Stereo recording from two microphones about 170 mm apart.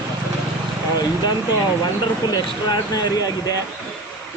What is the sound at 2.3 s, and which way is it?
Speech, 20° left (ahead or behind).